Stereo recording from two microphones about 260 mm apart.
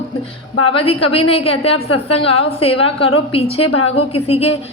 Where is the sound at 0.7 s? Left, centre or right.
Left.